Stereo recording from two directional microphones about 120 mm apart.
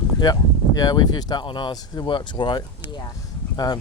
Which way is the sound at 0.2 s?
30° left (ahead or behind).